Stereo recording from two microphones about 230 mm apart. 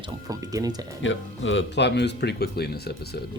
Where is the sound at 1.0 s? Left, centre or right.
Left.